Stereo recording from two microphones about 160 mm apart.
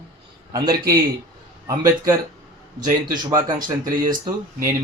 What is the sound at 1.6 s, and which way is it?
Mantra, 20° right (ahead or behind).